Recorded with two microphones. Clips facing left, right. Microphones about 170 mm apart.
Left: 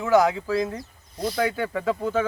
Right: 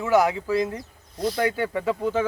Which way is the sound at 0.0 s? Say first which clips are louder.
Left 1 dB; 10° right (ahead or behind).